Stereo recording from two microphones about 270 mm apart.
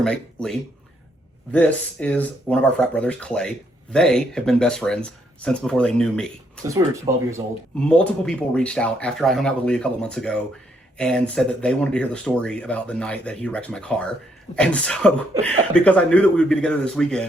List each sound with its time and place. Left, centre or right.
0.0 s speech: centre
1.5 s speech: centre
6.7 s speech: centre
7.8 s speech: centre